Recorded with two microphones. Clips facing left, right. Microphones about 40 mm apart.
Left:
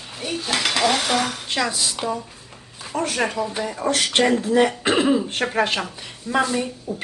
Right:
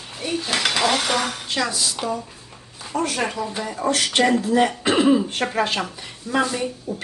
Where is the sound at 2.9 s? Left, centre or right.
Left.